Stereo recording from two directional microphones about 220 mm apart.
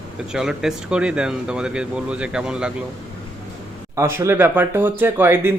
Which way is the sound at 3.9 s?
10° right (ahead or behind).